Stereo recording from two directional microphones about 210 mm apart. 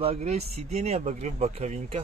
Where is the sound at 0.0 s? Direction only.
30° right (ahead or behind).